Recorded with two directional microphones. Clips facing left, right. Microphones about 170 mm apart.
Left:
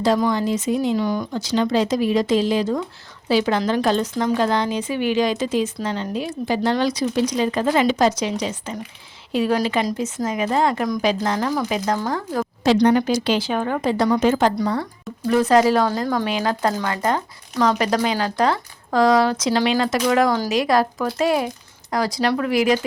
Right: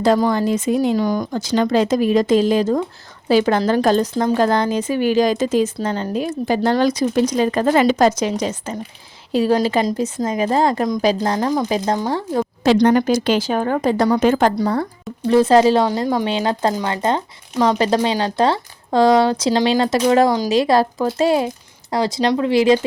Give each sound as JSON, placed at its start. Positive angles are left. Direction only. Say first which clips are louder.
{"t": 0.3, "sound": "speech", "louder": "right 3 dB", "side_deg": -50}
{"t": 4.1, "sound": "a woman's voice", "louder": "right 3 dB", "side_deg": -30}
{"t": 4.4, "sound": "a woman's voice", "louder": "right 3 dB", "side_deg": -45}
{"t": 12.6, "sound": "speech", "louder": "right 2 dB", "side_deg": -50}
{"t": 15.3, "sound": "speech", "louder": "right 3 dB", "side_deg": -30}
{"t": 16.0, "sound": "speech", "louder": "right 3 dB", "side_deg": -15}
{"t": 16.2, "sound": "speech", "louder": "right 2 dB", "side_deg": -25}